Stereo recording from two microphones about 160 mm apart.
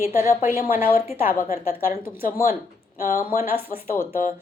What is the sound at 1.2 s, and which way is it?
A woman's voice, 60° left (ahead or behind).